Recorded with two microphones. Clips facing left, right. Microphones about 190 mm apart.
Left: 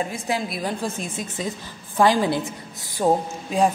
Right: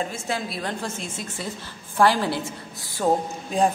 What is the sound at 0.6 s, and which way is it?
A woman's voice, 15° left (ahead or behind).